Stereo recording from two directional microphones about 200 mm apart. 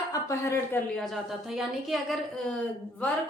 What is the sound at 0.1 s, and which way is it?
A woman's voice, 15° left (ahead or behind).